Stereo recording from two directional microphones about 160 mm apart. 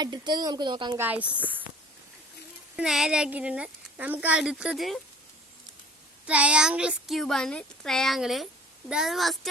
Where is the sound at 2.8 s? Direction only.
5° right (ahead or behind).